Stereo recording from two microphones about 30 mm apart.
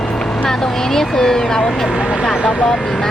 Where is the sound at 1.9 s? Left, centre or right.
Right.